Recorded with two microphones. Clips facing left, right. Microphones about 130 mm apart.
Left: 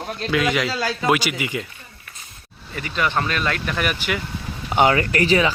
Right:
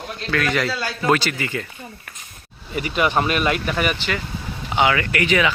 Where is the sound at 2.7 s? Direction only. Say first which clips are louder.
Right 3 dB; 15° right (ahead or behind).